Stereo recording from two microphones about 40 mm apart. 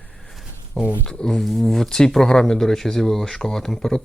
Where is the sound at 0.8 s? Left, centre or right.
Left.